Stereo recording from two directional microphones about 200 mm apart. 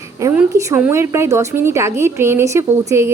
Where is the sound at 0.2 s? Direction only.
15° right (ahead or behind).